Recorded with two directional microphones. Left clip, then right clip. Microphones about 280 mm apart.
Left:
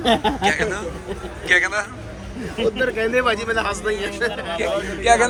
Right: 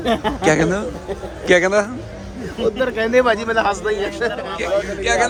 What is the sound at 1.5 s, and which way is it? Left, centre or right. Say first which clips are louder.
Speech: right 4 dB; centre.